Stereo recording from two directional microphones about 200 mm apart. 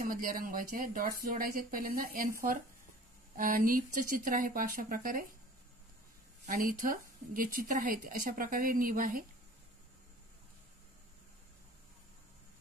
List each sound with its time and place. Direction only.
0.0 s speech: 45° right (ahead or behind)
3.3 s speech: 45° right (ahead or behind)
6.4 s speech: 45° right (ahead or behind)